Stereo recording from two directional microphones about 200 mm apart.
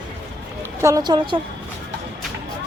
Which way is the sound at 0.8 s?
15° right (ahead or behind).